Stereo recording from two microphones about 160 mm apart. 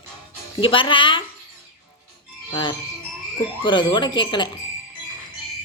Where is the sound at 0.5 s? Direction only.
35° left (ahead or behind).